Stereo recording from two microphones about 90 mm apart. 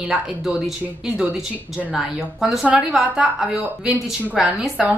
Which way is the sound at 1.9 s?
5° right (ahead or behind).